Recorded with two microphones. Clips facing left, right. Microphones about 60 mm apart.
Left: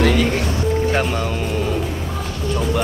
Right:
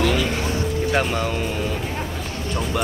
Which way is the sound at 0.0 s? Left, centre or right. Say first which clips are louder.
Left 4 dB; left.